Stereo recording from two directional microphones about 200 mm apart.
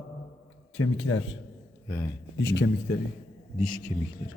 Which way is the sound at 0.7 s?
90° left.